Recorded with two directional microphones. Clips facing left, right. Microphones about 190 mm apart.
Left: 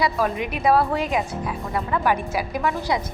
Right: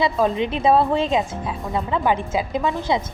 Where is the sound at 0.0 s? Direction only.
25° right (ahead or behind).